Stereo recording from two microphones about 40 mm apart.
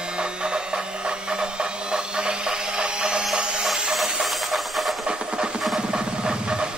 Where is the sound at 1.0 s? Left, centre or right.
Right.